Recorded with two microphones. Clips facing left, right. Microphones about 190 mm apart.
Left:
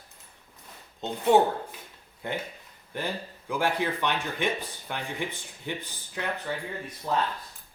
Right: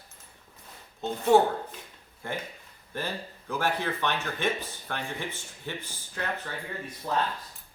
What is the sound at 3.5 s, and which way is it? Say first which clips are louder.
Speech: left 2 dB; 15° left (ahead or behind).